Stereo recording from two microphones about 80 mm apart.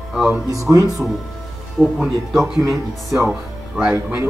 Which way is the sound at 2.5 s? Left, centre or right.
Right.